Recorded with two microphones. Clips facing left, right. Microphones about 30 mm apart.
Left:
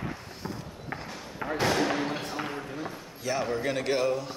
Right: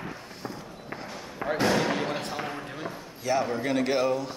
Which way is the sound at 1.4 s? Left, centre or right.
Centre.